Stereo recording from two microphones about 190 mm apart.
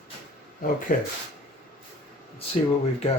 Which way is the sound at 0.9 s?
45° left (ahead or behind).